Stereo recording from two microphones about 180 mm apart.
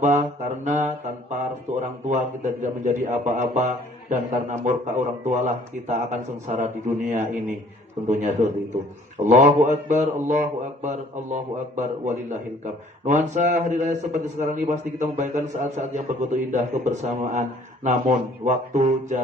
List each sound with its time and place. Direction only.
0.0 s mantra: 45° right (ahead or behind)
1.8 s a man's voice: 45° right (ahead or behind)